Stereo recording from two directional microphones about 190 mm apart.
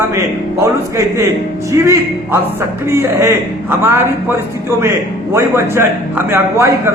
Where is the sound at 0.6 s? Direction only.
15° right (ahead or behind).